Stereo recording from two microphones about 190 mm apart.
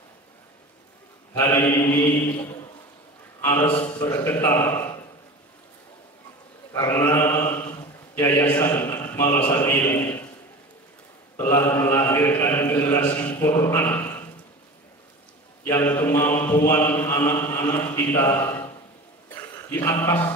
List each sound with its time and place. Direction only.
1.3 s mantra: 15° left (ahead or behind)
3.3 s a man's voice: 10° left (ahead or behind)
4.1 s mantra: 15° left (ahead or behind)
6.7 s mantra: 15° left (ahead or behind)
8.5 s a sound: 10° left (ahead or behind)
11.3 s mantra: 15° left (ahead or behind)
15.6 s mantra: 10° left (ahead or behind)
19.2 s a sound: 10° left (ahead or behind)